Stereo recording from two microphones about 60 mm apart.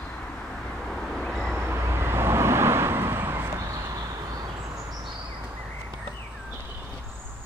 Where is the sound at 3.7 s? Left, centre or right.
Right.